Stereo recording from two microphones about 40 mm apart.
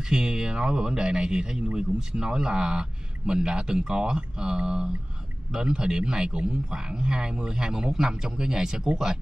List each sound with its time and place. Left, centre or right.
0.1 s a man's voice: centre